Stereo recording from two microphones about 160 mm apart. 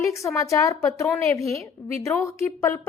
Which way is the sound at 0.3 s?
20° left (ahead or behind).